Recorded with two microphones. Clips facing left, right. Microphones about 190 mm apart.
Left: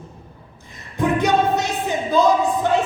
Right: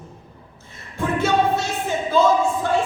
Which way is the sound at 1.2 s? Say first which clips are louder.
Right 2 dB; 15° left (ahead or behind).